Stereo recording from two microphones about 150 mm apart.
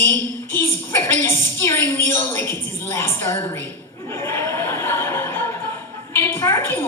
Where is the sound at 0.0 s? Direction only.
15° left (ahead or behind).